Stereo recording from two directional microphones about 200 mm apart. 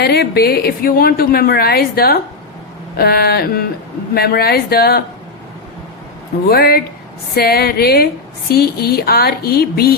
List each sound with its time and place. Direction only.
0.0 s a woman's voice: 55° left (ahead or behind)
6.5 s a woman's voice: 50° left (ahead or behind)